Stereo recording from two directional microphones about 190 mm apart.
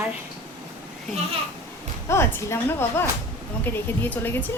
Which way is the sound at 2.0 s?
15° left (ahead or behind).